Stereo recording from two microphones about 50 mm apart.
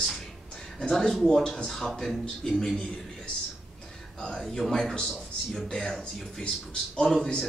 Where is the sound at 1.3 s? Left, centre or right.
Centre.